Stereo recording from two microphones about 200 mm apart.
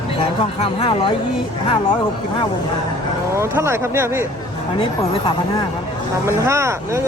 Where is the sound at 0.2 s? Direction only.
30° left (ahead or behind).